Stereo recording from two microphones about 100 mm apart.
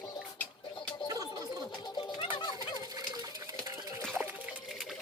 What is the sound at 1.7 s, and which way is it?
Music, 50° left (ahead or behind).